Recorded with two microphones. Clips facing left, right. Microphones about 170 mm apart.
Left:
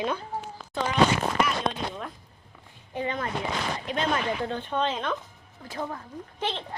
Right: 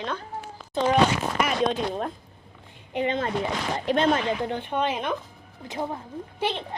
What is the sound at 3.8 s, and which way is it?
Speech, 35° right (ahead or behind).